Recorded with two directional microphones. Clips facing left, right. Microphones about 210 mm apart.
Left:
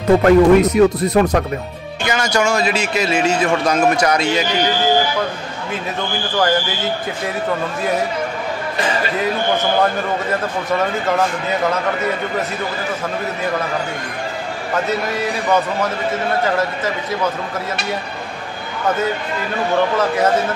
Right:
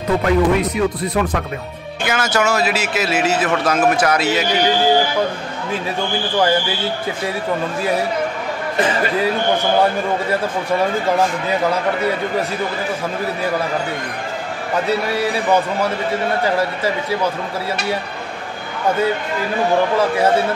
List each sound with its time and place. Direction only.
0.2 s speech: 45° left (ahead or behind)
2.0 s a man's voice: 5° right (ahead or behind)